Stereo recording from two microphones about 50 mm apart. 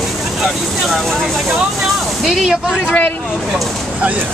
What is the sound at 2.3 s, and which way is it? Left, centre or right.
Speech, centre.